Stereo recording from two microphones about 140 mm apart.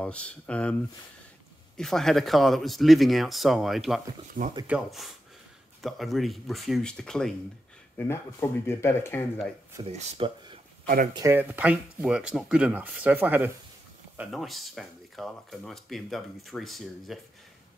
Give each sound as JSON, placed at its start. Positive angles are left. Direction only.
{"t": 0.0, "sound": "speech", "side_deg": 10}
{"t": 1.8, "sound": "speech", "side_deg": 5}
{"t": 8.0, "sound": "speech", "side_deg": 15}
{"t": 9.8, "sound": "speech", "side_deg": -45}
{"t": 11.3, "sound": "speech", "side_deg": -10}